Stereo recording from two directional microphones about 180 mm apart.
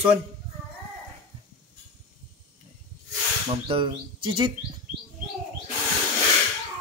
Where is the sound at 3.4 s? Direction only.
30° right (ahead or behind).